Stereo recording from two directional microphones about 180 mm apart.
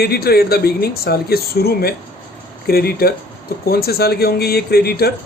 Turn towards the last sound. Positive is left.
turn(degrees=60)  # may be behind; listen again after turning